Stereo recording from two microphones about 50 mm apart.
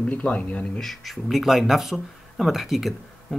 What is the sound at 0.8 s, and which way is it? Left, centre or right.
Speech, centre.